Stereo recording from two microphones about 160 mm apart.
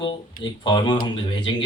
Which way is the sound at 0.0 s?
30° left (ahead or behind).